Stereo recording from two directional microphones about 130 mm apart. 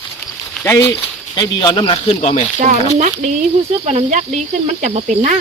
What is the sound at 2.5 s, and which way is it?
Speech, 75° right (ahead or behind).